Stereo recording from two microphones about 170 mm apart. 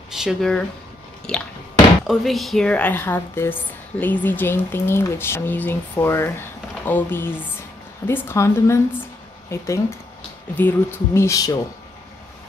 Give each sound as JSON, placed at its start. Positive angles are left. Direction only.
{"t": 0.1, "sound": "speech", "side_deg": -5}